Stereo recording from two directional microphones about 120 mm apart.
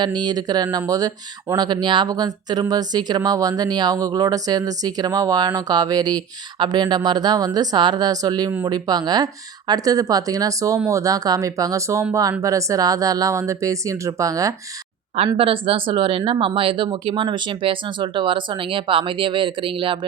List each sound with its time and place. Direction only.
0.0 s speech: 35° right (ahead or behind)
15.4 s speech: 50° right (ahead or behind)